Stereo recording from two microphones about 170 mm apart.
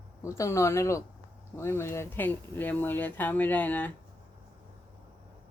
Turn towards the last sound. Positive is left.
turn(degrees=10)  # may be behind; listen again after turning